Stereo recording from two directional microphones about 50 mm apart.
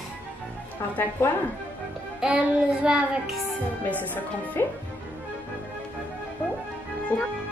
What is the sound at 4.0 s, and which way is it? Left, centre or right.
Speech, left.